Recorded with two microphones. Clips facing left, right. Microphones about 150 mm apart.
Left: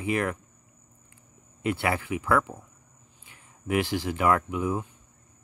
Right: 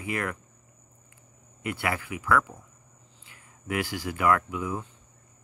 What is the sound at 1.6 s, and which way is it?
Speech, 25° left (ahead or behind).